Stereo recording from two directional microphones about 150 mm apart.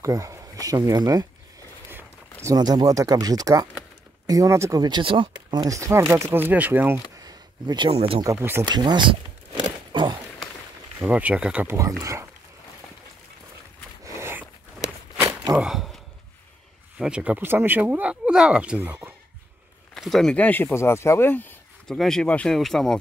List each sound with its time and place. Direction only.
0.0 s speech: 20° right (ahead or behind)
2.4 s speech: 25° right (ahead or behind)
7.2 s a sound: 25° right (ahead or behind)
8.2 s speech: 20° right (ahead or behind)
8.6 s speech: 30° right (ahead or behind)
9.6 s walk: 30° right (ahead or behind)
11.0 s speech: 10° right (ahead or behind)
14.0 s dog: 15° right (ahead or behind)
15.5 s speech: 5° right (ahead or behind)
17.0 s speech: 5° right (ahead or behind)
19.9 s speech: centre (ahead or behind)